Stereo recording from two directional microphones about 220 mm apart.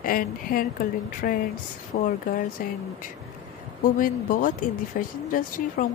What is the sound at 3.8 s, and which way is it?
Speech, 40° left (ahead or behind).